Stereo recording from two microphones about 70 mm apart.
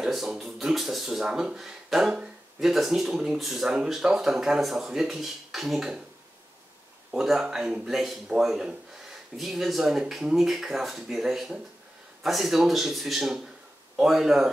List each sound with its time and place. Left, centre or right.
0.0 s speech: centre
7.1 s speech: centre